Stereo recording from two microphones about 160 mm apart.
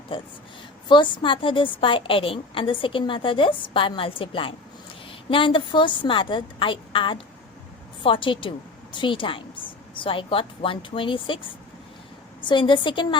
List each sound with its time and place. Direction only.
0.1 s a woman's voice: 30° left (ahead or behind)
12.4 s a woman's voice: 30° left (ahead or behind)